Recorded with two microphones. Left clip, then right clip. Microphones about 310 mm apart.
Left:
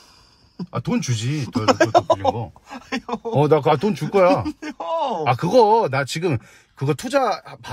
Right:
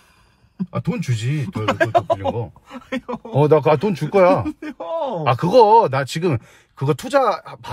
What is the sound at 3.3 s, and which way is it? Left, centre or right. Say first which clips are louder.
Speech: right 2 dB; centre.